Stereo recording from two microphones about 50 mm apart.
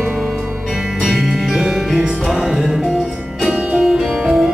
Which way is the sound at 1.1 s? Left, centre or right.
Centre.